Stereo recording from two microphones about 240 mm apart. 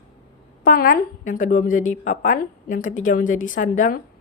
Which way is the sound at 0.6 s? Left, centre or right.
Left.